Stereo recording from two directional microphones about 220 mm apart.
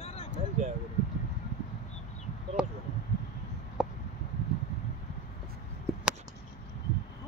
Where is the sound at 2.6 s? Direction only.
5° right (ahead or behind).